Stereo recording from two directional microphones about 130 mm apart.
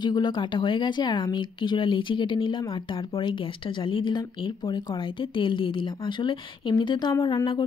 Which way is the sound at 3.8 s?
40° left (ahead or behind).